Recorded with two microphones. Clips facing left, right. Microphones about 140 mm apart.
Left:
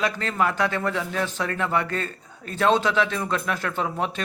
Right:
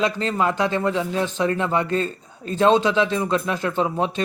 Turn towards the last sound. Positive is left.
turn(degrees=-25)  # may be behind; listen again after turning